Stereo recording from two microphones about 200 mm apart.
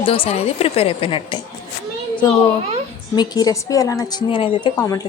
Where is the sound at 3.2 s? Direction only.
20° left (ahead or behind).